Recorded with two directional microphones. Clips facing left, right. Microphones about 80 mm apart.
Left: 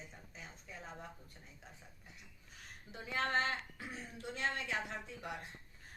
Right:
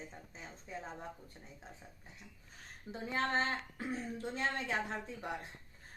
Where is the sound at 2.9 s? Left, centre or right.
Right.